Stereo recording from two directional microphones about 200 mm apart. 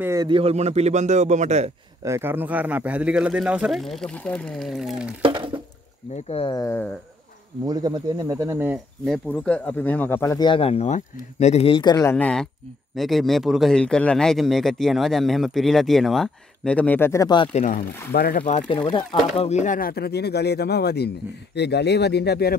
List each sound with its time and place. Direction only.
0.0 s a man's voice: 15° right (ahead or behind); by 1.7 s 35° right (ahead or behind)
2.0 s a man's voice: 10° right (ahead or behind)
5.2 s a sound: 25° right (ahead or behind)
6.1 s speech: 30° left (ahead or behind); by 6.9 s 15° left (ahead or behind)
7.6 s speech: 20° right (ahead or behind)
9.0 s a man's voice: 5° left (ahead or behind); by 17.5 s 20° left (ahead or behind)
17.5 s speech: 40° left (ahead or behind)
18.5 s speech: 30° left (ahead or behind); by 22.6 s 55° left (ahead or behind)